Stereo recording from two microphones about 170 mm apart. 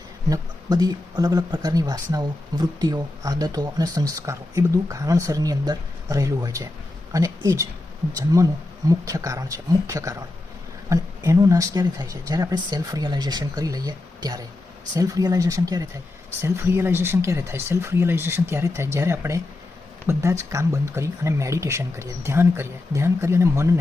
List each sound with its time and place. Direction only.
0.3 s speech: 20° right (ahead or behind)
8.9 s speech: 20° right (ahead or behind)